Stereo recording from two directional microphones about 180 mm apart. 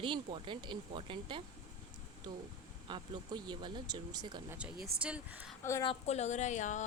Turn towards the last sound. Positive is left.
turn(degrees=40)  # may be behind; listen again after turning